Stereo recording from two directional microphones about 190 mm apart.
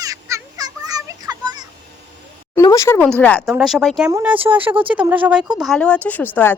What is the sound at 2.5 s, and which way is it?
A woman's voice, 15° left (ahead or behind).